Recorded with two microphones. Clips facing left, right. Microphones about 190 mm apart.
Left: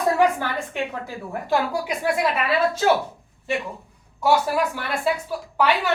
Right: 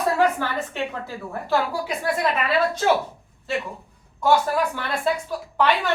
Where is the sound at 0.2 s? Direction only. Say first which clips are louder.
Left 1 dB; 15° left (ahead or behind).